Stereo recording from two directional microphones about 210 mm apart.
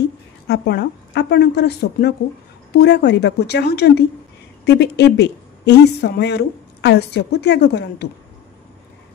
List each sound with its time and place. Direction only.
0.5 s a woman's voice: 50° left (ahead or behind)